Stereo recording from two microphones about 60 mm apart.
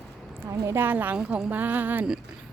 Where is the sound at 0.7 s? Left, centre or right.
Right.